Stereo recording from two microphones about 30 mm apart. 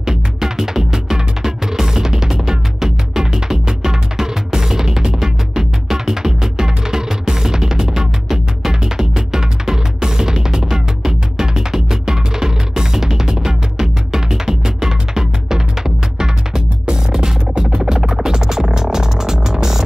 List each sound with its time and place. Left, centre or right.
0.0 s music: centre